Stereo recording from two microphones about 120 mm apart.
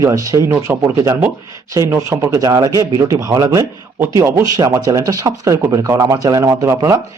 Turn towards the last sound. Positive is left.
turn(degrees=-30)  # may be behind; listen again after turning